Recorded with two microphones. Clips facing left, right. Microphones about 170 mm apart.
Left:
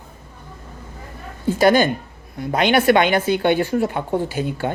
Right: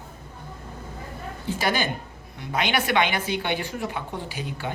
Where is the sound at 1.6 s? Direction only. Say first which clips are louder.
Left 11 dB; 50° left (ahead or behind).